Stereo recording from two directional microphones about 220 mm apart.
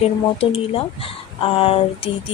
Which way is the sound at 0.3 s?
25° left (ahead or behind).